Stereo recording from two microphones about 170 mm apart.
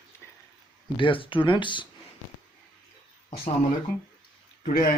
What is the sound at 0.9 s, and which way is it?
Speech, 30° left (ahead or behind).